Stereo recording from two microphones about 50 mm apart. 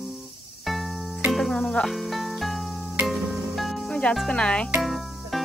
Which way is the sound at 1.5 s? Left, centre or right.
Centre.